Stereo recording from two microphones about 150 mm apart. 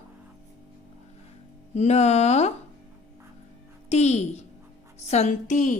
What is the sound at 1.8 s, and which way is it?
Speech, 50° left (ahead or behind).